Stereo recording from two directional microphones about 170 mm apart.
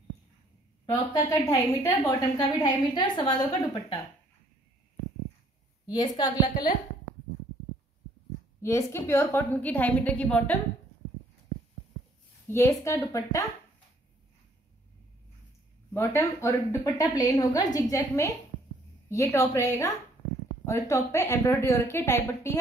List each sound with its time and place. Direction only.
0.8 s a woman's voice: 20° left (ahead or behind)
5.9 s a woman's voice: 25° left (ahead or behind)
8.5 s a woman's voice: 15° left (ahead or behind)
12.4 s a woman's voice: 15° left (ahead or behind)
15.9 s a woman's voice: 15° left (ahead or behind)